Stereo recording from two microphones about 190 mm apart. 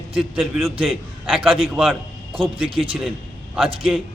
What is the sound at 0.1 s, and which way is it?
Speech, centre (ahead or behind).